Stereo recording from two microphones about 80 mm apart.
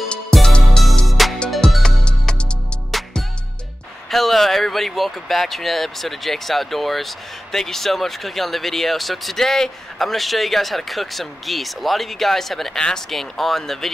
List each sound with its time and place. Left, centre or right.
0.1 s music: centre
4.1 s speech: centre